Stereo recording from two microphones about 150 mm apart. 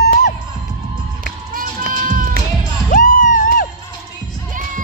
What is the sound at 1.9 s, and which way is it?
Music, 65° right (ahead or behind).